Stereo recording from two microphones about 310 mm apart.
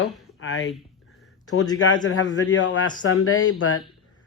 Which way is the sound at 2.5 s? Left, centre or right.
Left.